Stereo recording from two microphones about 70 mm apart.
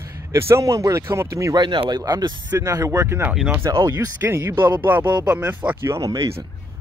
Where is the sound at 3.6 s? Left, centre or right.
Right.